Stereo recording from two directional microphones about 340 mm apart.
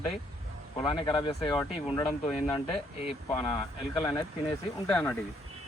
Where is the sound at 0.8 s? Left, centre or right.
Centre.